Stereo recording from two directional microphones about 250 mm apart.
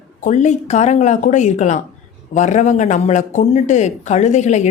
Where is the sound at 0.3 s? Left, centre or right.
Left.